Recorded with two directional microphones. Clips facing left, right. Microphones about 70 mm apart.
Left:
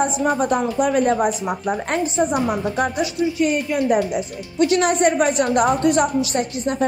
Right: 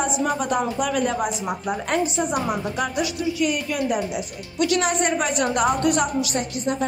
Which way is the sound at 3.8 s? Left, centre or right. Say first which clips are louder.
Left 6 dB; left.